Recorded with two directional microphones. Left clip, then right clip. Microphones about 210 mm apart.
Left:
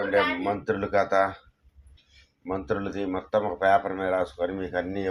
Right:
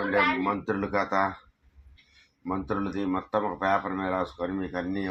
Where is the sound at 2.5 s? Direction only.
10° left (ahead or behind).